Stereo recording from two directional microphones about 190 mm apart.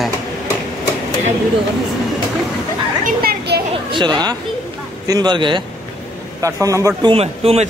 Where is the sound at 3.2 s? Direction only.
55° right (ahead or behind).